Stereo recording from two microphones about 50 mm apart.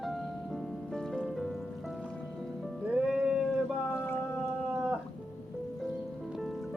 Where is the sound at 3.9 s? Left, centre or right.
Left.